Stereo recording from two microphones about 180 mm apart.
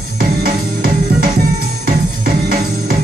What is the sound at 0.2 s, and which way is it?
Music, 55° right (ahead or behind).